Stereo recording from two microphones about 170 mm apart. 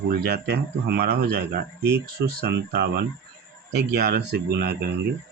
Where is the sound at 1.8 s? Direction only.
15° right (ahead or behind).